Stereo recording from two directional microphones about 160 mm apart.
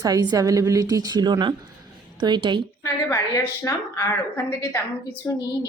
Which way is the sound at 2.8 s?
20° left (ahead or behind).